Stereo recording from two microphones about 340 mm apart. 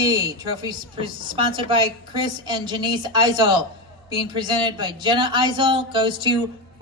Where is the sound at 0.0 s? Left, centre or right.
Centre.